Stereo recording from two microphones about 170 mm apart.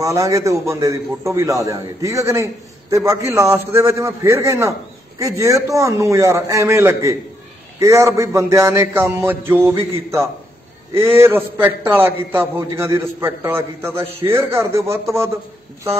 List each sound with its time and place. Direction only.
0.0 s a man's voice: 20° right (ahead or behind)